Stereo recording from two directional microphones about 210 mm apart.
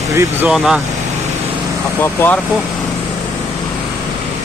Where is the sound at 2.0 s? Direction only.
10° left (ahead or behind).